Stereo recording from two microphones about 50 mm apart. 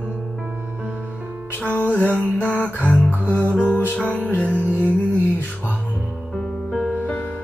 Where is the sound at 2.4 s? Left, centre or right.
Left.